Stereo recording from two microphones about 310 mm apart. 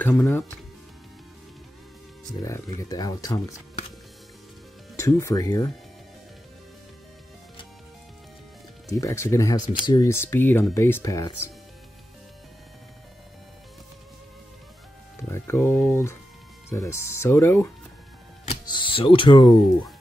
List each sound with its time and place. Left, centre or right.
0.0 s speech: centre
2.4 s speech: centre
4.9 s speech: centre
8.9 s speech: centre
15.2 s speech: centre
18.5 s music: centre